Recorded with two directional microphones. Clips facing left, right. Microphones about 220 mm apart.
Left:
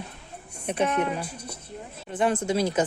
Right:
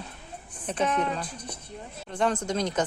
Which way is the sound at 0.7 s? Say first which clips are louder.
Left 2 dB; 10° left (ahead or behind).